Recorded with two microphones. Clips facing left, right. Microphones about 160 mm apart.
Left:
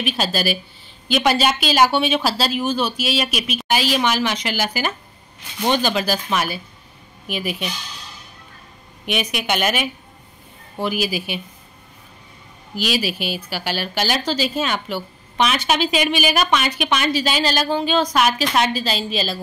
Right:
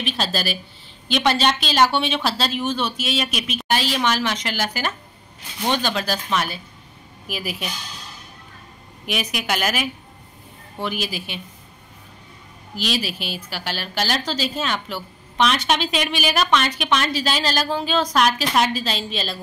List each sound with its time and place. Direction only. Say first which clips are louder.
0.0 s a woman's voice: left 3 dB; 5° left (ahead or behind)
9.0 s a woman's voice: left 3 dB; centre (ahead or behind)
12.7 s a woman's voice: left 3 dB; 5° left (ahead or behind)